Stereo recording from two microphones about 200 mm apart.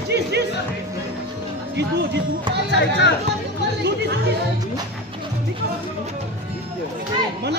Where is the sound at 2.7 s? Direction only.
60° left (ahead or behind).